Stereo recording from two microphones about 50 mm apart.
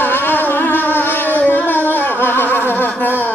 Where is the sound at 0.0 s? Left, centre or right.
Left.